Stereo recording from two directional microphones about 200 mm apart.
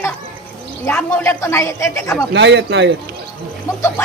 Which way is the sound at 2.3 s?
60° right (ahead or behind).